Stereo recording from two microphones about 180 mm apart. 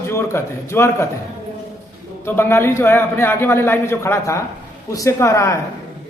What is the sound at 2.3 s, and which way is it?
Speech, 10° left (ahead or behind).